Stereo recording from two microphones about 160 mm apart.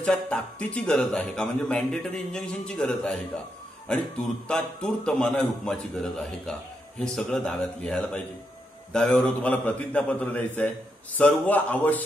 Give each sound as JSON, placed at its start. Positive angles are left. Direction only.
{"t": 0.0, "sound": "a man's voice", "side_deg": 5}
{"t": 4.5, "sound": "a man's voice", "side_deg": 5}